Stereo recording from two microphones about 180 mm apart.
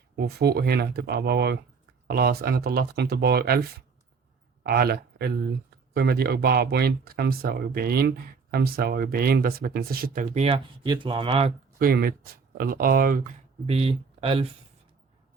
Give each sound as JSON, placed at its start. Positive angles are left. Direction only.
{"t": 0.2, "sound": "speech", "side_deg": -65}
{"t": 10.3, "sound": "speech", "side_deg": -30}
{"t": 11.8, "sound": "speech", "side_deg": -55}
{"t": 13.7, "sound": "speech", "side_deg": -35}